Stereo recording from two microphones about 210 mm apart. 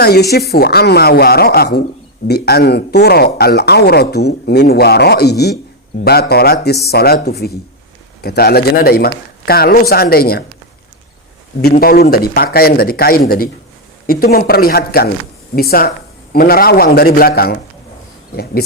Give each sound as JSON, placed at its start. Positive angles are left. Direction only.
{"t": 0.0, "sound": "speech", "side_deg": 50}
{"t": 11.6, "sound": "speech", "side_deg": 45}